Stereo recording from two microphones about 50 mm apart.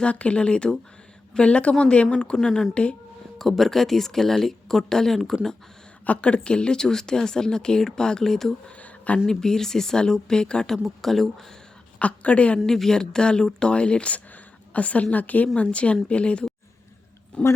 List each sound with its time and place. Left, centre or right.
0.0 s speech: left; by 5.4 s centre
6.1 s speech: left
8.8 s a sound: left
9.2 s speech: centre
10.8 s speech: centre
11.9 s speech: left
12.6 s a woman's voice: centre